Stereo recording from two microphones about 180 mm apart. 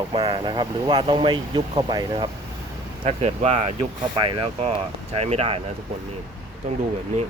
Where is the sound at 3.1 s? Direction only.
35° right (ahead or behind).